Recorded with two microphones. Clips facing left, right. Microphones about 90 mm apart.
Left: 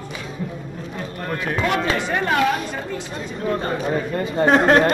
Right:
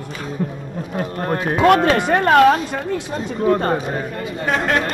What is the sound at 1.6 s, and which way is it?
Speech, 60° right (ahead or behind).